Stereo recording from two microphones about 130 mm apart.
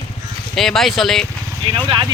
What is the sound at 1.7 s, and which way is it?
Speech, 40° right (ahead or behind).